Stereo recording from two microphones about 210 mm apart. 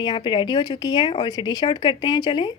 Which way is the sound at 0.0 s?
20° left (ahead or behind).